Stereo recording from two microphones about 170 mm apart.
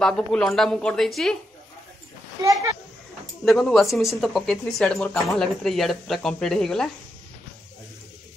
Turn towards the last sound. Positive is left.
turn(degrees=5)  # may be behind; listen again after turning